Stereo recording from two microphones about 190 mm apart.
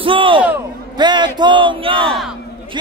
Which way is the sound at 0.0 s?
25° right (ahead or behind).